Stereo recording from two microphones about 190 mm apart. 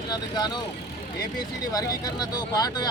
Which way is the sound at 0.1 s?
20° left (ahead or behind).